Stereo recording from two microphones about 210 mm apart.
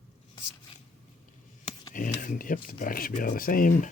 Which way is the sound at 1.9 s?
40° left (ahead or behind).